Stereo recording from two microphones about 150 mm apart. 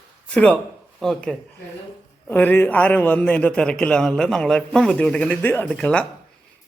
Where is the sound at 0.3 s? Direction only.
10° left (ahead or behind).